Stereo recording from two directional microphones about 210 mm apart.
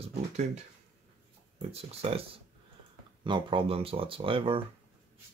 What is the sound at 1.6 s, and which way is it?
Speech, 30° right (ahead or behind).